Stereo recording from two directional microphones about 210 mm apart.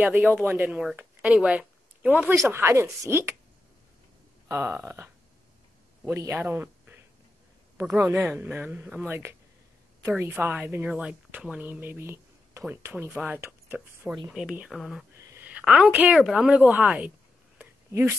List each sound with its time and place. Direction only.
0.0 s a woman's voice: 10° right (ahead or behind)
4.5 s a woman's voice: 10° right (ahead or behind)
6.1 s a woman's voice: 10° right (ahead or behind)
17.6 s a sound: 10° right (ahead or behind)